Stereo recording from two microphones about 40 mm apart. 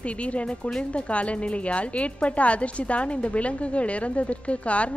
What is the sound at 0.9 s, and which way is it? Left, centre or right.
A woman's voice, left.